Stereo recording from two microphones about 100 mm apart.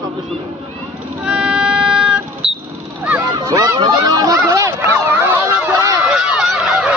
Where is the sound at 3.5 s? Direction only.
40° right (ahead or behind).